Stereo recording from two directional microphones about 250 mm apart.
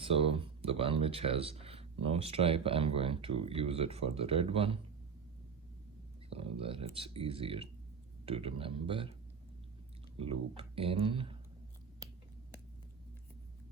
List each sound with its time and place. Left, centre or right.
0.0 s speech: right
6.3 s speech: right
10.2 s speech: right